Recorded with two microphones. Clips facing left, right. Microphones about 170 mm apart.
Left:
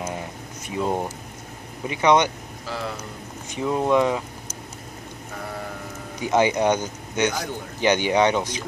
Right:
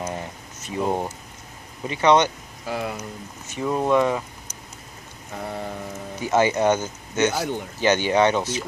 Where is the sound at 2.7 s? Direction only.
15° right (ahead or behind).